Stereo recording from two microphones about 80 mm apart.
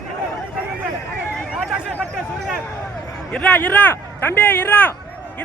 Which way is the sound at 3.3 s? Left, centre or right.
Centre.